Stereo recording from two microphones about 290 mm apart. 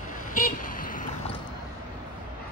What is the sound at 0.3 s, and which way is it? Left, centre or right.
Vehicle, left.